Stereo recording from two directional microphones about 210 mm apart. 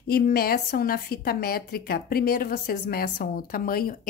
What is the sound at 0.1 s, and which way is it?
A woman's voice, 45° left (ahead or behind).